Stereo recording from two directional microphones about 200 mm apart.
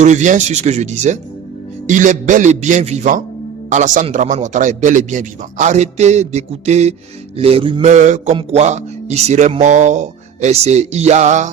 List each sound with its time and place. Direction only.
0.0 s a man's voice: 35° right (ahead or behind)
7.3 s mantra: 30° right (ahead or behind)
7.9 s a man's voice: 35° right (ahead or behind)